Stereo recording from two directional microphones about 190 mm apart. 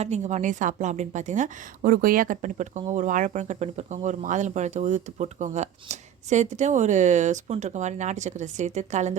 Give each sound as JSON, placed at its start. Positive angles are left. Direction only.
{"t": 0.0, "sound": "a woman's voice", "side_deg": -40}